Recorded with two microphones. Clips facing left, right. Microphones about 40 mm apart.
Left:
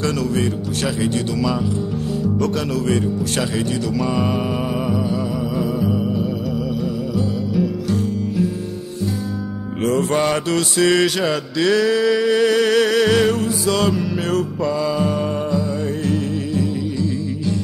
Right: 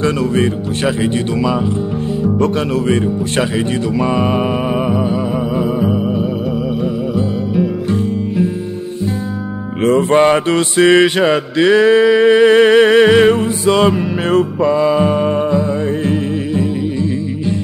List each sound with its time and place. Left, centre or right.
0.0 s speech: right
5.6 s music: right
9.8 s mantra: right
16.1 s music: right